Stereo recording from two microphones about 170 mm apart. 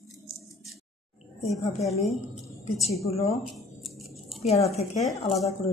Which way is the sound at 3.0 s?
35° left (ahead or behind).